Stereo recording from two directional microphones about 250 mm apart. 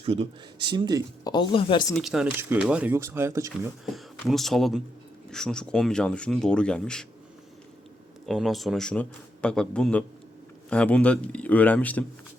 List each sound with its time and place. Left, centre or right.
0.0 s speech: right
1.2 s speech: centre
1.9 s speech: centre
3.8 s a man's voice: centre
8.3 s a man's voice: centre